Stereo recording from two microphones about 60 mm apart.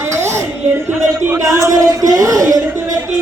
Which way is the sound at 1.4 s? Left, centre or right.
Right.